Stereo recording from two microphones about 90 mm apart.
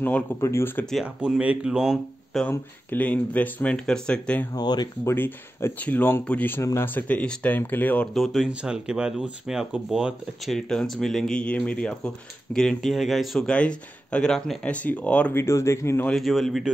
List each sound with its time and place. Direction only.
0.4 s speech: 30° left (ahead or behind)
1.0 s speech: 10° right (ahead or behind)
2.3 s speech: 5° left (ahead or behind)
2.9 s speech: 15° left (ahead or behind)
4.5 s speech: 50° left (ahead or behind)
5.0 s speech: 25° left (ahead or behind)
8.1 s speech: centre (ahead or behind)
12.5 s speech: 5° left (ahead or behind)
13.5 s speech: 10° left (ahead or behind)
15.3 s speech: 30° left (ahead or behind)
16.1 s speech: centre (ahead or behind)